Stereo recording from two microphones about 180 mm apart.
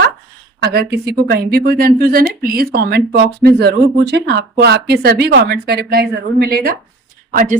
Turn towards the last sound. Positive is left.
turn(degrees=-45)  # may be behind; listen again after turning